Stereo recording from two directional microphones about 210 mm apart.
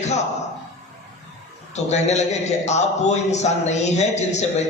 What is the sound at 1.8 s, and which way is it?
A man's voice, 30° left (ahead or behind).